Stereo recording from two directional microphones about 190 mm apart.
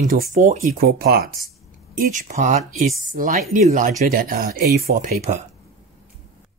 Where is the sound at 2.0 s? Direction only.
45° right (ahead or behind).